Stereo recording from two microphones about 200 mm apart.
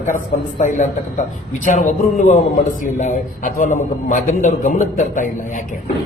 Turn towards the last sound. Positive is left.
turn(degrees=40)  # may be behind; listen again after turning